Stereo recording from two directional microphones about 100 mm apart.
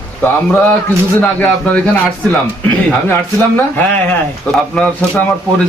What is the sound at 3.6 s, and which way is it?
Speech, 15° left (ahead or behind).